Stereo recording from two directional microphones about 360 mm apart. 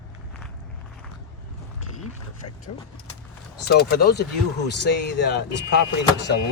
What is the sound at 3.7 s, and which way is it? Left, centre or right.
Speech, left.